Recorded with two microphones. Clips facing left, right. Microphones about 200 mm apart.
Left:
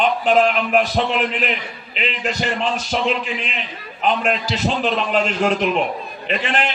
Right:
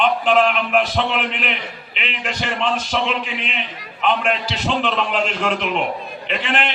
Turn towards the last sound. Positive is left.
turn(degrees=40)  # may be behind; listen again after turning